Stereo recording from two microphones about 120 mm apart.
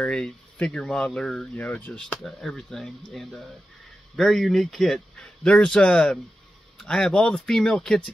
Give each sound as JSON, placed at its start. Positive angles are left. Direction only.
{"t": 0.0, "sound": "a man's voice", "side_deg": 10}